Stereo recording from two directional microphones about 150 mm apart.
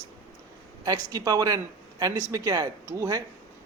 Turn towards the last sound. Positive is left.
turn(degrees=-20)  # may be behind; listen again after turning